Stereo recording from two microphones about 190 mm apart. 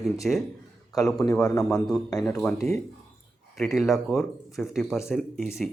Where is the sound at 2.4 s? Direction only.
5° left (ahead or behind).